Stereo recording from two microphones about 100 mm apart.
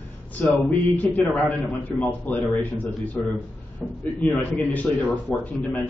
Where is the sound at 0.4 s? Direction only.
15° left (ahead or behind).